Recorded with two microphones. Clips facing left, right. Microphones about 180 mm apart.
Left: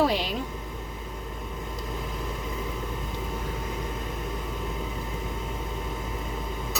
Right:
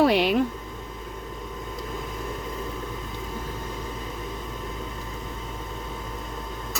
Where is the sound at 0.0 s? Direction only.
65° right (ahead or behind).